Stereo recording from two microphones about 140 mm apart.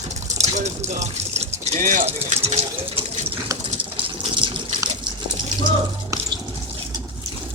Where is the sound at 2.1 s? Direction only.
45° right (ahead or behind).